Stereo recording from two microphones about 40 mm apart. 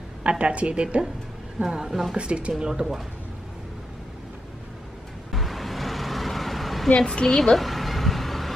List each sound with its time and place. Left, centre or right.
0.2 s a woman's voice: right
2.6 s speech: centre
5.3 s vehicle: centre
6.9 s a woman's voice: left
7.2 s speech: centre
7.5 s vehicle: centre